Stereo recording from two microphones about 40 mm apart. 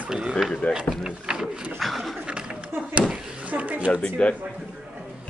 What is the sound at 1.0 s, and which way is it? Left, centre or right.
Speech, centre.